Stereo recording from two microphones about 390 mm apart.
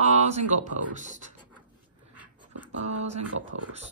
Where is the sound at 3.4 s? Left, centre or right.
Right.